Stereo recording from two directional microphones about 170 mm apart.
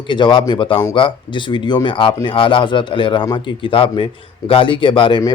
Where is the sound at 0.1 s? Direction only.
30° left (ahead or behind).